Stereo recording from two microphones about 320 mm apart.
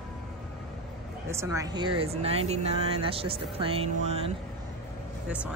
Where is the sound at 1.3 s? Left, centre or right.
Centre.